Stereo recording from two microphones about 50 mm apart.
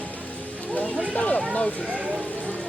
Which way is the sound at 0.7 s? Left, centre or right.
Left.